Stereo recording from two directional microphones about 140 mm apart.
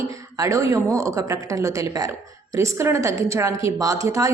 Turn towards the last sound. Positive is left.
turn(degrees=-25)  # may be behind; listen again after turning